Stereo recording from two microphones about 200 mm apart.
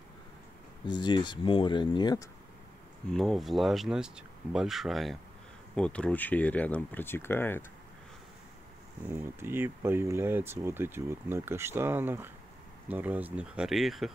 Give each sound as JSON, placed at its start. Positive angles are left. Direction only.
{"t": 0.8, "sound": "speech", "side_deg": 20}
{"t": 3.1, "sound": "speech", "side_deg": 0}
{"t": 9.1, "sound": "speech", "side_deg": -10}